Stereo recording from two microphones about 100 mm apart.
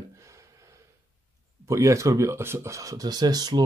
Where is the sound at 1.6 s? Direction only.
30° right (ahead or behind).